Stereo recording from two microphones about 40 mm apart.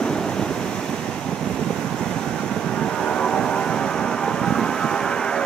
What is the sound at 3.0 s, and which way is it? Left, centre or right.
Vehicle, centre.